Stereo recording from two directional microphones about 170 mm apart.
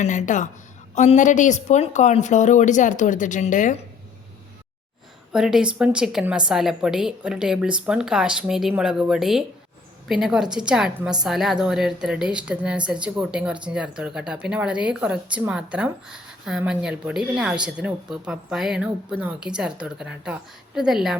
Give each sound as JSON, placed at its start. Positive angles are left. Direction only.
{"t": 0.0, "sound": "a woman's voice", "side_deg": 45}
{"t": 5.3, "sound": "a woman's voice", "side_deg": -5}